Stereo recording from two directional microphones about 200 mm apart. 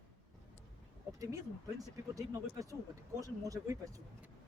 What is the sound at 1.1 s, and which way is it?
Speech, 15° right (ahead or behind).